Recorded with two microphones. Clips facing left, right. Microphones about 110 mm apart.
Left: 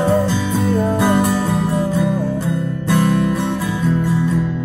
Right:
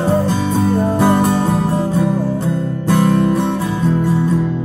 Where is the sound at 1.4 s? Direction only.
35° right (ahead or behind).